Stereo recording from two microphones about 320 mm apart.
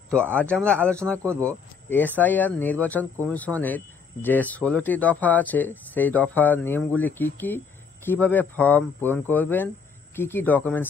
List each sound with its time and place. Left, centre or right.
0.1 s speech: centre